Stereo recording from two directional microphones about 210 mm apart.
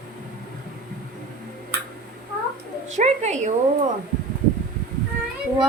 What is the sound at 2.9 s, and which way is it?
Speech, 35° right (ahead or behind).